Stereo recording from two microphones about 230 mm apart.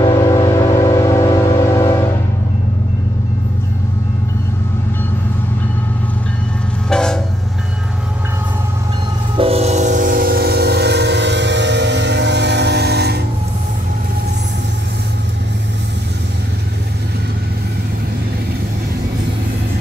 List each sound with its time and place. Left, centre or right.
0.0 s a sound: centre
6.9 s train: centre
9.4 s train: right